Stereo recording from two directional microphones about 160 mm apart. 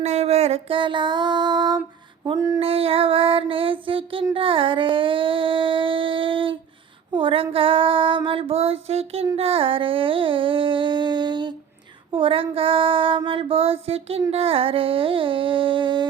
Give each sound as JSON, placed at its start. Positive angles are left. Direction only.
{"t": 0.0, "sound": "child singing", "side_deg": -45}
{"t": 2.2, "sound": "a sound", "side_deg": -20}
{"t": 2.6, "sound": "child singing", "side_deg": -35}